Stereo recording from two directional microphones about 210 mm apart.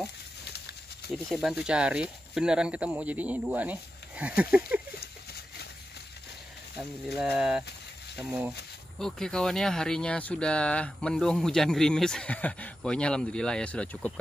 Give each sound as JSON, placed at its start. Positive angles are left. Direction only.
{"t": 1.1, "sound": "speech", "side_deg": 0}
{"t": 5.0, "sound": "a sound", "side_deg": 50}
{"t": 6.8, "sound": "speech", "side_deg": -5}